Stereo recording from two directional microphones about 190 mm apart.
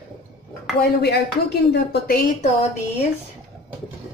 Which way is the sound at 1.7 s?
55° left (ahead or behind).